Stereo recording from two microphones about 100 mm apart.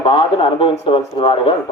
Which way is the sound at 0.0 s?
70° left (ahead or behind).